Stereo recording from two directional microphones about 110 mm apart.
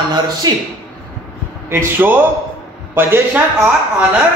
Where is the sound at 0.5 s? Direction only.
35° right (ahead or behind).